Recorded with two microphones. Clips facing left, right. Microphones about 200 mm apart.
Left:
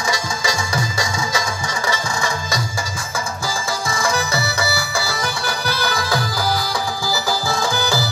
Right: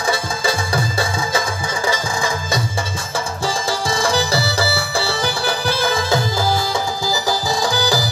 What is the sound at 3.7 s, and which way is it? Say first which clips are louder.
Music: right 2 dB; 30° right (ahead or behind).